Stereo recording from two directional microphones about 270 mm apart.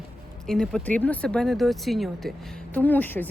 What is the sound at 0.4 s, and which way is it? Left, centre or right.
Speech, centre.